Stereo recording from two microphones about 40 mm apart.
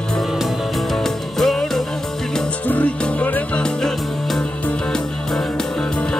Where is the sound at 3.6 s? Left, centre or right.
Centre.